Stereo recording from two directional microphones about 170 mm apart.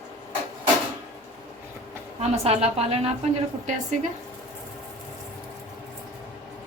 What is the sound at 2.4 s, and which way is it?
Speech, 40° right (ahead or behind).